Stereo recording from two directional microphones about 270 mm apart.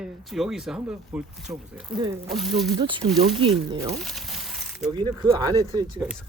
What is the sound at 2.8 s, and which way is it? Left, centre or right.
Speech, centre.